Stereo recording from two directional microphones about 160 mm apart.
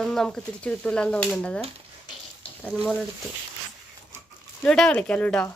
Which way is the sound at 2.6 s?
Centre (ahead or behind).